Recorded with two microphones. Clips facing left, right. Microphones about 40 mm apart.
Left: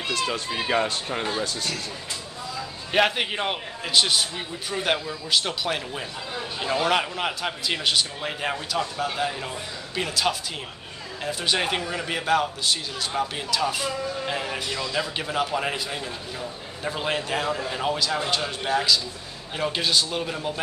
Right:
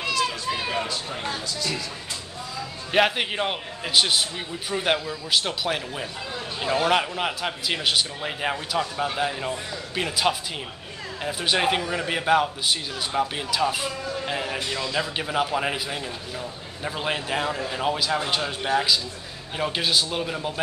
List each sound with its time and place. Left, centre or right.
0.3 s speech: left
2.9 s a man's voice: centre
17.9 s a man's voice: centre